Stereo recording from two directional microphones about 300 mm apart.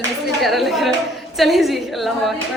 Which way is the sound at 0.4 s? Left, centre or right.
Centre.